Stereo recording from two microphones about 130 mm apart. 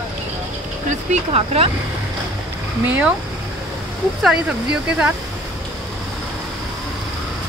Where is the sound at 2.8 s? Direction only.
15° right (ahead or behind).